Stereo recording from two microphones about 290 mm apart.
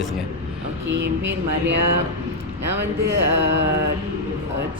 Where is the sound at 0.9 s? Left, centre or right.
Right.